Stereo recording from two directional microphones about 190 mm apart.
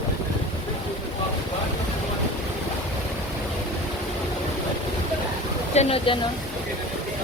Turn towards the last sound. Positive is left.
turn(degrees=30)  # may be behind; listen again after turning